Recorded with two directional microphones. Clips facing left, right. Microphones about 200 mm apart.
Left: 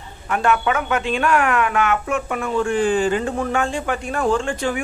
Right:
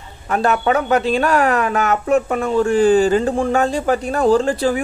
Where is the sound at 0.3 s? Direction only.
35° right (ahead or behind).